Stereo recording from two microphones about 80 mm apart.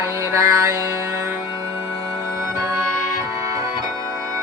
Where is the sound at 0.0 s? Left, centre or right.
Right.